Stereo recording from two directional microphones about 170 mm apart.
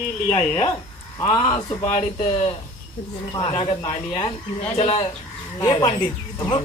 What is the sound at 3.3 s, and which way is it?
Speech, 30° left (ahead or behind).